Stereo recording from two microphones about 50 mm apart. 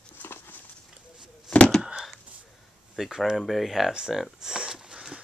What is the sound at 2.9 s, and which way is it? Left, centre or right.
Speech, centre.